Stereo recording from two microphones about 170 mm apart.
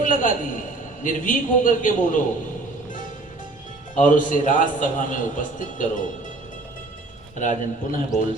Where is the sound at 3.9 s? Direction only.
50° left (ahead or behind).